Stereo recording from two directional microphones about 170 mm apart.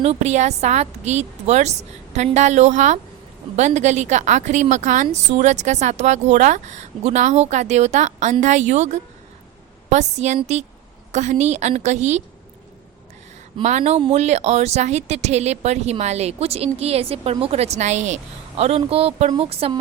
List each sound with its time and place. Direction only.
0.0 s a woman's voice: 40° right (ahead or behind)
13.6 s speech: 40° right (ahead or behind)